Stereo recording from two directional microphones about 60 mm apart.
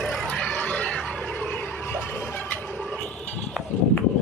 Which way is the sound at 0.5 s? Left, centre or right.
Left.